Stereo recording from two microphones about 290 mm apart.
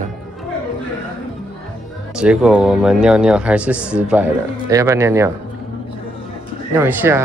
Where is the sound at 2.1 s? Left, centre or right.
Centre.